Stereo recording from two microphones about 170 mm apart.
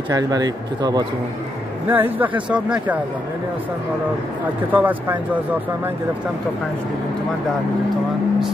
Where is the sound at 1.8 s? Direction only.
10° right (ahead or behind).